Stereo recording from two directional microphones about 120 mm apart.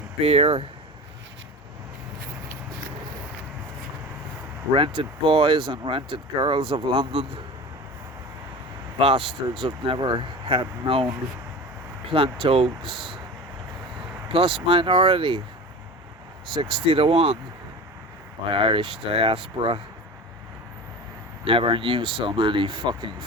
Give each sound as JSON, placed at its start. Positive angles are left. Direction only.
{"t": 0.2, "sound": "speech", "side_deg": -60}
{"t": 4.7, "sound": "speech", "side_deg": -45}
{"t": 9.0, "sound": "speech", "side_deg": -50}
{"t": 9.6, "sound": "speech", "side_deg": -40}
{"t": 12.1, "sound": "speech", "side_deg": -50}
{"t": 12.8, "sound": "speech", "side_deg": 0}
{"t": 14.3, "sound": "speech", "side_deg": -50}
{"t": 16.8, "sound": "speech", "side_deg": -55}
{"t": 18.5, "sound": "speech", "side_deg": -45}
{"t": 21.4, "sound": "speech", "side_deg": -45}